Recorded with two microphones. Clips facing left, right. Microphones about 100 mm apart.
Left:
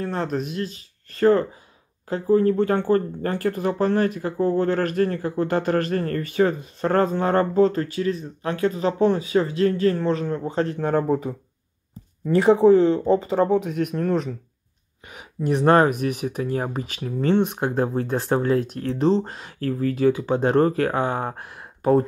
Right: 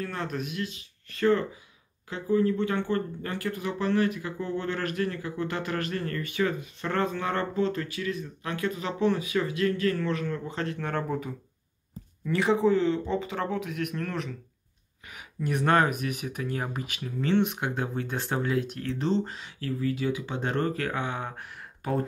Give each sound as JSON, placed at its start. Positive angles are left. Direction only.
{"t": 0.0, "sound": "speech", "side_deg": 35}